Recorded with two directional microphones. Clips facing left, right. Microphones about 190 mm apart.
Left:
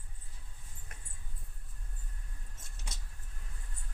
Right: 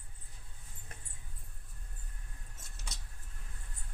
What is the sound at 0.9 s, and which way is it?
Dog, 30° right (ahead or behind).